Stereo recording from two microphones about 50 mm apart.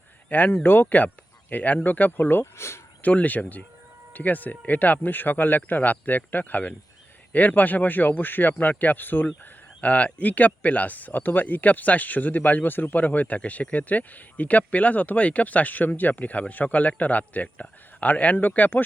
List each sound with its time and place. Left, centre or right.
0.3 s speech: left
0.5 s speech: left
0.9 s speech: left
2.6 s speech: left
3.0 s speech: left
9.4 s speech: left